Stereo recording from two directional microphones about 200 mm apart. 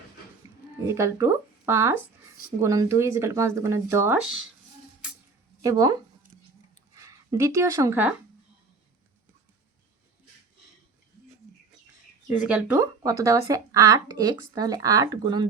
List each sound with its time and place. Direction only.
0.9 s speech: 15° right (ahead or behind)
5.6 s speech: 20° right (ahead or behind)
12.3 s speech: 5° right (ahead or behind)